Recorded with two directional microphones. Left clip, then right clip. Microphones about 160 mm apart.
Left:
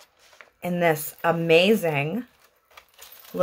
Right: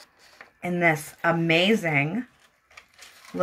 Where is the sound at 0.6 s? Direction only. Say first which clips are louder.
Even; 40° left (ahead or behind).